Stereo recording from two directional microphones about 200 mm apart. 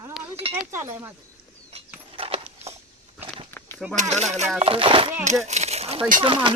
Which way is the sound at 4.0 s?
35° right (ahead or behind).